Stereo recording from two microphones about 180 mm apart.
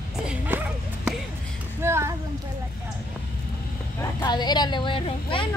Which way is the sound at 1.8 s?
15° right (ahead or behind).